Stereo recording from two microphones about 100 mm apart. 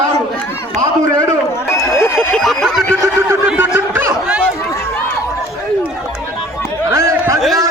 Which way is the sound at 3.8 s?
20° right (ahead or behind).